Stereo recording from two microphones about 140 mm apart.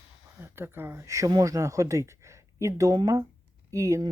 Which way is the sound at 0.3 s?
15° right (ahead or behind).